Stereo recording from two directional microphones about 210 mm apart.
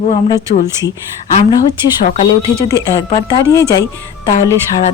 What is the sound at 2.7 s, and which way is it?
Speech, 20° left (ahead or behind).